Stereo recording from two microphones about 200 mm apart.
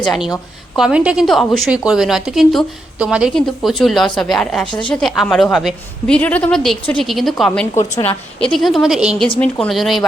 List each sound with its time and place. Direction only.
0.0 s a woman's voice: centre (ahead or behind)
4.7 s speech: 25° left (ahead or behind)
4.9 s a woman's voice: centre (ahead or behind)